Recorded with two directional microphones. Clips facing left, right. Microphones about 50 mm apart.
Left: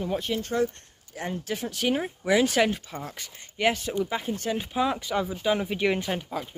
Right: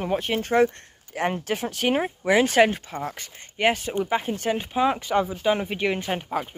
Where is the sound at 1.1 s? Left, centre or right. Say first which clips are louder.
Right 7 dB; right.